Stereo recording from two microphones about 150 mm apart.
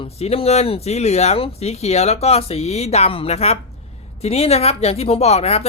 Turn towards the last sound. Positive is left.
turn(degrees=45)  # may be behind; listen again after turning